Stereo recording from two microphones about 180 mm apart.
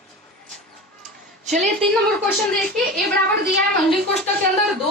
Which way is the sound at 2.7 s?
60° right (ahead or behind).